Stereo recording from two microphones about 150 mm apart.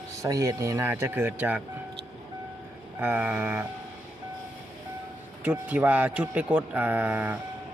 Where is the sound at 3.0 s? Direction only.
10° right (ahead or behind).